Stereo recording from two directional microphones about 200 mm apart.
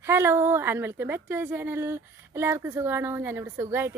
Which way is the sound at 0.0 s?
15° right (ahead or behind).